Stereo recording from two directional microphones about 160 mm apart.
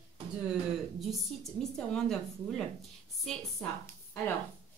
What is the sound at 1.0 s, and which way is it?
A woman's voice, centre (ahead or behind).